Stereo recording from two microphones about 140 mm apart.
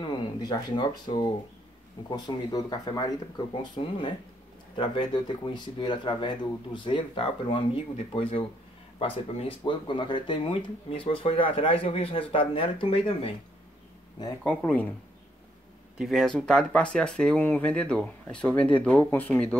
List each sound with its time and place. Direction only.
0.0 s speech: 30° left (ahead or behind)
9.0 s speech: 40° left (ahead or behind)
14.6 s speech: 10° left (ahead or behind)
16.0 s speech: centre (ahead or behind); by 19.4 s 15° left (ahead or behind)